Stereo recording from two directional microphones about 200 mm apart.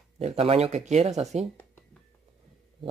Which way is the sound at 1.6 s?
10° left (ahead or behind).